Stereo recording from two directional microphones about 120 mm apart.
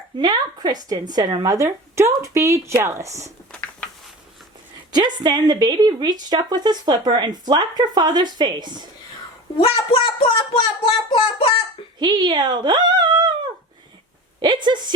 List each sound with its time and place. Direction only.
0.2 s a woman's voice: 35° right (ahead or behind)
3.5 s a sound: 10° left (ahead or behind)
4.9 s a woman's voice: 35° right (ahead or behind)
9.6 s speech: 55° left (ahead or behind)
11.9 s speech: 35° right (ahead or behind)
14.4 s a woman's voice: 40° right (ahead or behind)